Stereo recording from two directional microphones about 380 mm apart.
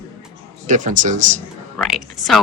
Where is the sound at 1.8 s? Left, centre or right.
Centre.